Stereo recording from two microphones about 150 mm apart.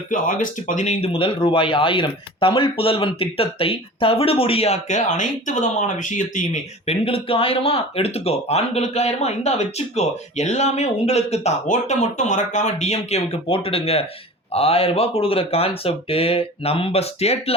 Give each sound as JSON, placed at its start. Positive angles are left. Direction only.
{"t": 0.1, "sound": "speech", "side_deg": 60}